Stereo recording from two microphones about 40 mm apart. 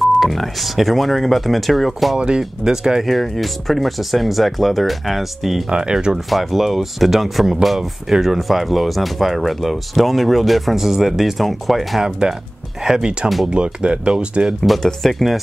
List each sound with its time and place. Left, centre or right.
0.0 s speech: centre
2.1 s speech: right
2.6 s speech: centre
3.1 s speech: centre
5.7 s speech: centre
6.3 s speech: centre
12.0 s speech: centre
14.6 s speech: centre